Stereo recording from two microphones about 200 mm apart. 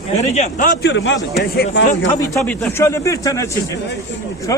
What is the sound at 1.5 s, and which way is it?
Speech, 50° left (ahead or behind).